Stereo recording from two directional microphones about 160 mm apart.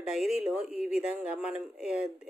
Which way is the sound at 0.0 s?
5° right (ahead or behind).